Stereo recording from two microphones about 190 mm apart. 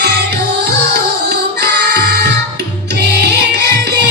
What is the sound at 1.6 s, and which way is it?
Music, 60° right (ahead or behind).